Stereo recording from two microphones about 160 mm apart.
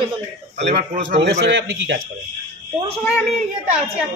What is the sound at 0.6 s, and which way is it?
A man's voice, 90° right.